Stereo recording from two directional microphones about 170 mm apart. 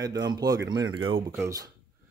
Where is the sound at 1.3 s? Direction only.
15° right (ahead or behind).